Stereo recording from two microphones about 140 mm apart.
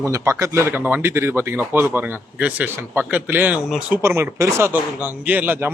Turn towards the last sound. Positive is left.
turn(degrees=-15)  # may be behind; listen again after turning